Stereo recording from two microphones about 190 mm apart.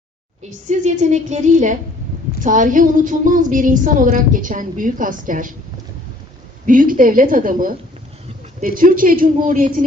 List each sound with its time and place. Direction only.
0.7 s a woman's voice: 40° right (ahead or behind)
6.7 s a woman's voice: 45° right (ahead or behind)